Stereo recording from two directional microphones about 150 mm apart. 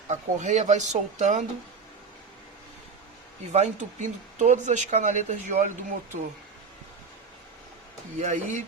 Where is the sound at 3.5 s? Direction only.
50° right (ahead or behind).